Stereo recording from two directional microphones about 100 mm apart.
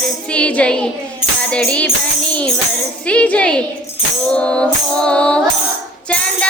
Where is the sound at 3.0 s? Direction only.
10° left (ahead or behind).